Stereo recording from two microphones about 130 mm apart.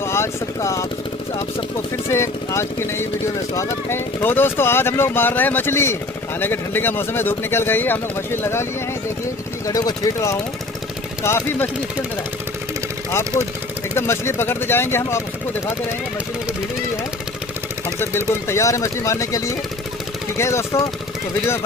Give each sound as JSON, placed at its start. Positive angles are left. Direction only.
{"t": 0.0, "sound": "speech", "side_deg": 20}
{"t": 2.0, "sound": "speech", "side_deg": 20}
{"t": 9.7, "sound": "speech", "side_deg": 30}
{"t": 13.9, "sound": "speech", "side_deg": 20}
{"t": 17.9, "sound": "speech", "side_deg": 20}